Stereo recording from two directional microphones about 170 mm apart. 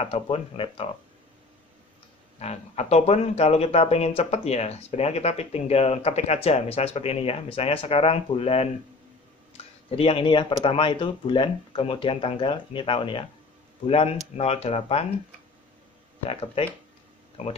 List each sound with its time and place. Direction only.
0.0 s speech: 35° left (ahead or behind)
2.3 s speech: 40° left (ahead or behind)
16.3 s speech: 35° left (ahead or behind)